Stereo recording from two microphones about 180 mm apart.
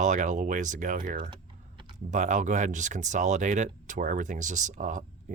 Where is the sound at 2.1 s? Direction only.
45° right (ahead or behind).